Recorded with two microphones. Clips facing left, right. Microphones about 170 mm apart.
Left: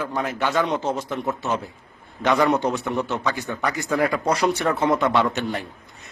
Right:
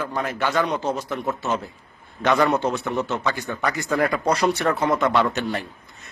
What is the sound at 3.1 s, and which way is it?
Speech, centre (ahead or behind).